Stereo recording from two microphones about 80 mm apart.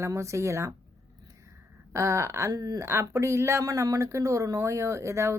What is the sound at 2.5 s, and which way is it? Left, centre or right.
Speech, right.